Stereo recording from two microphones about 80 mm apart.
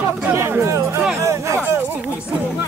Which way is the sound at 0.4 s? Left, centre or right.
Right.